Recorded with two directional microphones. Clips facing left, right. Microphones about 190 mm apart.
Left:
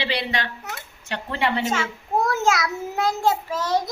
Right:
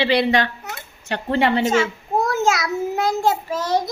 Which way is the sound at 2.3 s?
Centre (ahead or behind).